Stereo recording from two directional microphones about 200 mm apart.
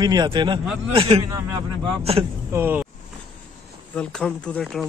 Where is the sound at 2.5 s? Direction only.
10° right (ahead or behind).